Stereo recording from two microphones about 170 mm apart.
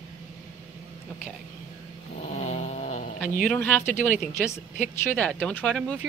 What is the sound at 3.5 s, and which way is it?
Speech, 10° left (ahead or behind).